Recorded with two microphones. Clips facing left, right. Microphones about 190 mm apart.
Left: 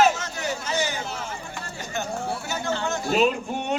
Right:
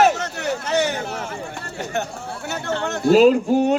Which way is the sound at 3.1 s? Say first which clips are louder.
Right 10 dB; 35° right (ahead or behind).